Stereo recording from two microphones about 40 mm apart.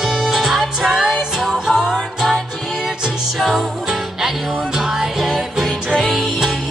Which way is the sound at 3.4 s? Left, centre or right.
Centre.